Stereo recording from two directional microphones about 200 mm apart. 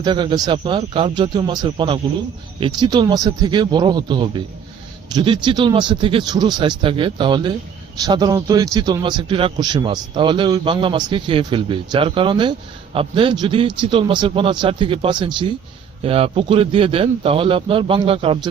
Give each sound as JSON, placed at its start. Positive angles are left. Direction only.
{"t": 0.0, "sound": "a man's voice", "side_deg": -25}